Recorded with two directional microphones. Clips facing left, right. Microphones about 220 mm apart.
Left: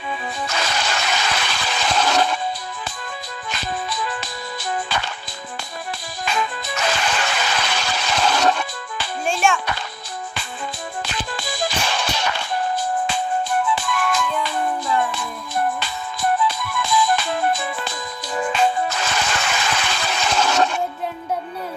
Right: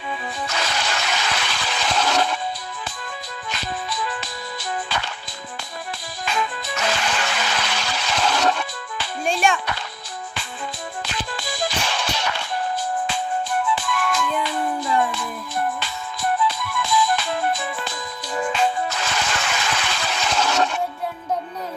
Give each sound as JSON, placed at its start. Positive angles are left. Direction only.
{"t": 0.4, "sound": "a sound", "side_deg": 45}
{"t": 3.5, "sound": "music", "side_deg": 45}
{"t": 6.2, "sound": "music", "side_deg": 45}
{"t": 9.2, "sound": "music", "side_deg": 0}
{"t": 11.0, "sound": "music", "side_deg": 45}
{"t": 13.7, "sound": "music", "side_deg": 50}
{"t": 16.5, "sound": "music", "side_deg": 45}